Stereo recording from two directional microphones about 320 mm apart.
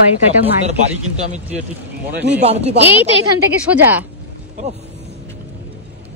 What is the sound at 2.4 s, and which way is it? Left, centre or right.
Speech, centre.